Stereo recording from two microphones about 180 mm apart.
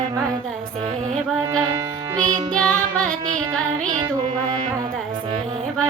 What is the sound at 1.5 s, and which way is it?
Music, 20° right (ahead or behind).